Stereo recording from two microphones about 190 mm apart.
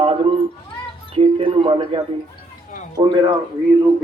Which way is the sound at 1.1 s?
30° right (ahead or behind).